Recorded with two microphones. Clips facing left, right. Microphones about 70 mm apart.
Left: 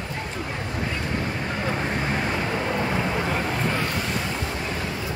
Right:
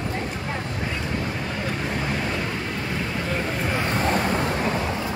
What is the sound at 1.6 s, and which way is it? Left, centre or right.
Vehicle, centre.